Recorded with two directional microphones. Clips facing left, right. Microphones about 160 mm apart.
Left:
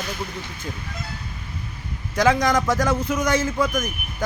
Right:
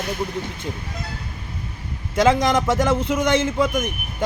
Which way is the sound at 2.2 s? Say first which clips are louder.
Right 2 dB; 25° right (ahead or behind).